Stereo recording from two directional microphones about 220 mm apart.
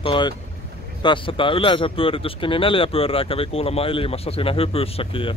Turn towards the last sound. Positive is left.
turn(degrees=25)  # may be behind; listen again after turning